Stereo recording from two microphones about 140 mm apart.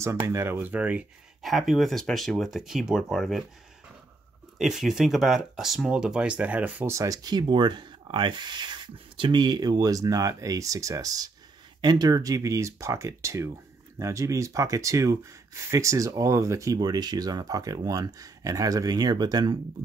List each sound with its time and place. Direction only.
0.0 s speech: 20° right (ahead or behind)
1.4 s speech: centre (ahead or behind)
4.6 s speech: centre (ahead or behind); by 19.5 s 30° right (ahead or behind)